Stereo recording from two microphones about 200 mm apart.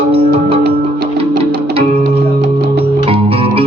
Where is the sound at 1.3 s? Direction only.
50° right (ahead or behind).